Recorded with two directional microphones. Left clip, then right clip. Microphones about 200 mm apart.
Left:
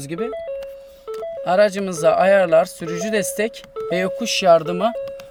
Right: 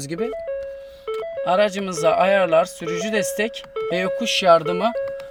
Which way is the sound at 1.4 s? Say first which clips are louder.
Left 3 dB; 10° left (ahead or behind).